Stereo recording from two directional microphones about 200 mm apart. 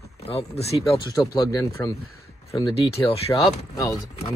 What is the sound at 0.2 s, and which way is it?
Speech, 30° left (ahead or behind).